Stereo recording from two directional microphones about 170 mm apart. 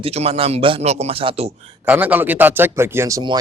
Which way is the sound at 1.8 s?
10° right (ahead or behind).